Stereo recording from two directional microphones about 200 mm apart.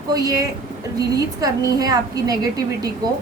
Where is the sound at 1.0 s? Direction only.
20° right (ahead or behind).